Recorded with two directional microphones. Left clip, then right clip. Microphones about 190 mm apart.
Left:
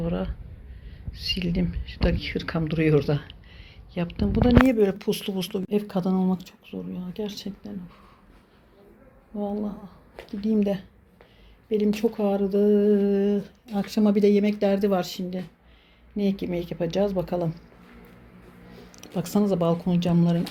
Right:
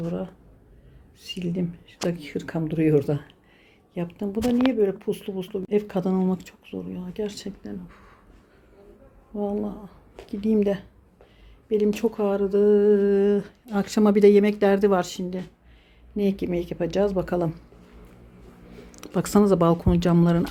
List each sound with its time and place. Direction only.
0.0 s speech: 5° right (ahead or behind)
1.3 s speech: 5° right (ahead or behind)
9.4 s speech: 15° right (ahead or behind)
11.9 s speech: 5° right (ahead or behind)
18.7 s speech: 35° right (ahead or behind)